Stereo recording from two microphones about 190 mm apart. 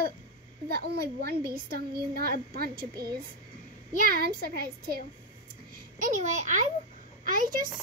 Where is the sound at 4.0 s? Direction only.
50° right (ahead or behind).